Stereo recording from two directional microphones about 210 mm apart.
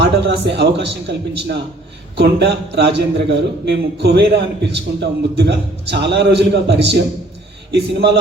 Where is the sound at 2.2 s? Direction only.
55° right (ahead or behind).